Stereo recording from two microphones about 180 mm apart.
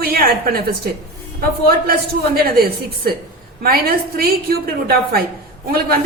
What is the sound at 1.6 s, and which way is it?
A woman's voice, 55° right (ahead or behind).